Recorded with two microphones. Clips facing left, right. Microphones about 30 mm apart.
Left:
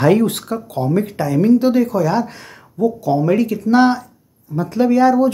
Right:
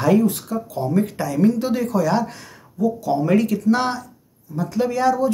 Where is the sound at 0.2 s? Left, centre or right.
Left.